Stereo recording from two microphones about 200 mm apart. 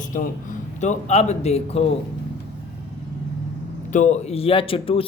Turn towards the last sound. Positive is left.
turn(degrees=25)  # may be behind; listen again after turning